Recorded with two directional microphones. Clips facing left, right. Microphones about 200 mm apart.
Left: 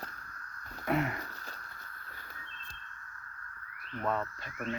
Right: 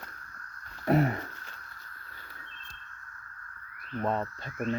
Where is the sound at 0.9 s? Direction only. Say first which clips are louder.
Right 6 dB; 35° right (ahead or behind).